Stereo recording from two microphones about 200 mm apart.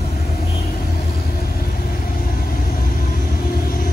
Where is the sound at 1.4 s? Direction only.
50° left (ahead or behind).